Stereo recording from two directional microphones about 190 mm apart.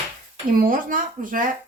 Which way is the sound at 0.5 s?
50° right (ahead or behind).